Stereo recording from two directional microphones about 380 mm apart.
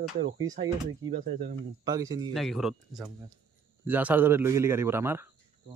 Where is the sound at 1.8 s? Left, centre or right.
Centre.